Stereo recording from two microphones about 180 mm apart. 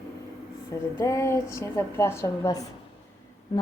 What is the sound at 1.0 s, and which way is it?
A woman's voice, 15° left (ahead or behind).